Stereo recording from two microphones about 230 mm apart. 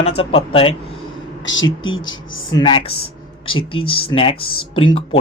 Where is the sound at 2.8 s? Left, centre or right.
Left.